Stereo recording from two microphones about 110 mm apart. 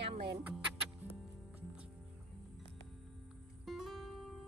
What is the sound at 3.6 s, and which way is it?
Music, centre (ahead or behind).